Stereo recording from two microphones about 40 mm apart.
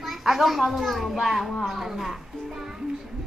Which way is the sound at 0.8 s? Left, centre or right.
Centre.